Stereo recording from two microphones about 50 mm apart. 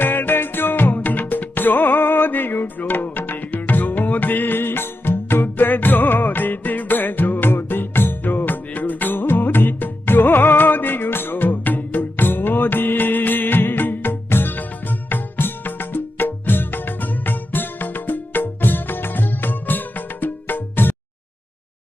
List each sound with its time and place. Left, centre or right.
0.0 s music: left